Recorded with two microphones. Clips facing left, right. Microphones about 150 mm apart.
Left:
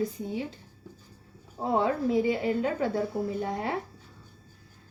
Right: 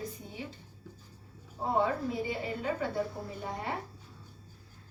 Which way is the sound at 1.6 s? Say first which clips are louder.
Left 4 dB; 90° left.